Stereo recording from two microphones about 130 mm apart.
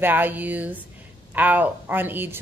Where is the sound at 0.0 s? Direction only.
15° right (ahead or behind).